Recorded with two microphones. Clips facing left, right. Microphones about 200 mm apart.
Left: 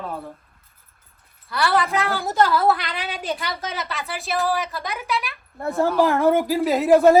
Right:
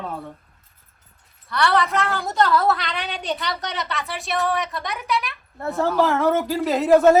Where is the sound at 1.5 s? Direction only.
5° left (ahead or behind).